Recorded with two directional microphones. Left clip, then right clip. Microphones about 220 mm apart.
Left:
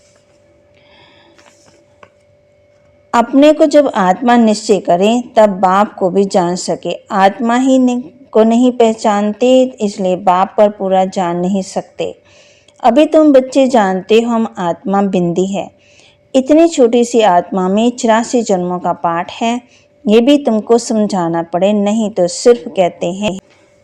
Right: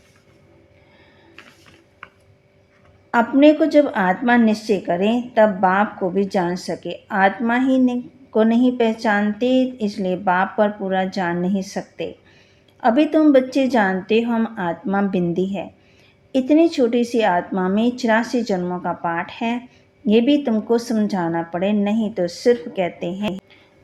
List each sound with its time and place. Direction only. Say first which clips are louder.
3.1 s speech: left 5 dB; 35° left (ahead or behind)